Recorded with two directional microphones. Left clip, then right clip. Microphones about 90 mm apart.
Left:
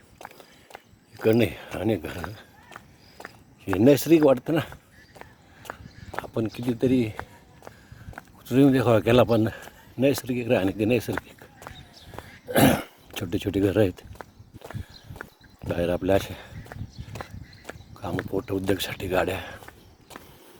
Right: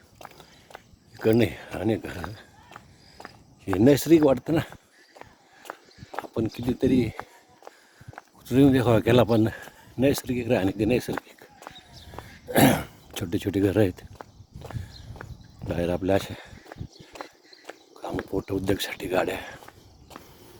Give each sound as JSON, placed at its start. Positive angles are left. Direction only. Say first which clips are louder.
{"t": 1.3, "sound": "speech", "louder": "even", "side_deg": -5}
{"t": 3.8, "sound": "speech", "louder": "even", "side_deg": -10}
{"t": 6.2, "sound": "speech", "louder": "even", "side_deg": -10}
{"t": 8.4, "sound": "speech", "louder": "even", "side_deg": -20}
{"t": 9.4, "sound": "a sound", "louder": "right 1 dB", "side_deg": -30}
{"t": 10.3, "sound": "speech", "louder": "left 1 dB", "side_deg": -10}
{"t": 12.5, "sound": "throat clearing", "louder": "even", "side_deg": -30}
{"t": 13.2, "sound": "speech", "louder": "even", "side_deg": -25}
{"t": 15.7, "sound": "speech", "louder": "left 2 dB", "side_deg": -15}
{"t": 17.9, "sound": "speech", "louder": "left 1 dB", "side_deg": -15}